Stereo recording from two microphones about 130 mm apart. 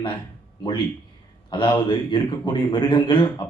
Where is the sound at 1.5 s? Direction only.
40° left (ahead or behind).